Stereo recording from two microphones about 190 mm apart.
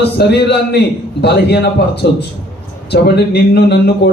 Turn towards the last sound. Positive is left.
turn(degrees=60)  # may be behind; listen again after turning